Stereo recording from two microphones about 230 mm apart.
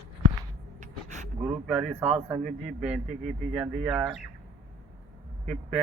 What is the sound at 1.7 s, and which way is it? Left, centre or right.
Speech, centre.